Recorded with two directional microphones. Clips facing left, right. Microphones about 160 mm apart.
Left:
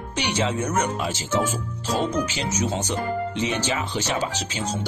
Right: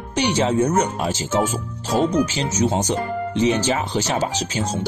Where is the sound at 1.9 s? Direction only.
10° right (ahead or behind).